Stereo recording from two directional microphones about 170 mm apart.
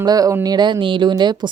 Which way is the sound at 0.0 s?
20° right (ahead or behind).